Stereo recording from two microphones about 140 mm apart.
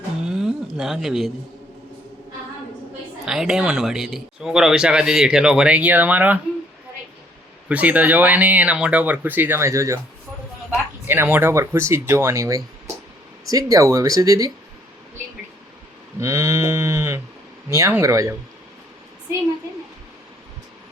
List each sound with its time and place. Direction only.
0.3 s a sound: 5° right (ahead or behind)
3.2 s speech: 5° right (ahead or behind)
7.7 s speech: 10° right (ahead or behind)
11.0 s speech: 15° right (ahead or behind)
16.2 s speech: 20° right (ahead or behind)